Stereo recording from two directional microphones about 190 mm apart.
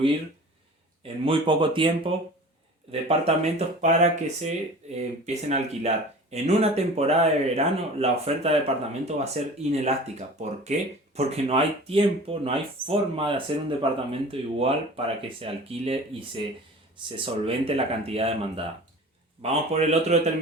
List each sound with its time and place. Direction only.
1.0 s speech: 30° right (ahead or behind)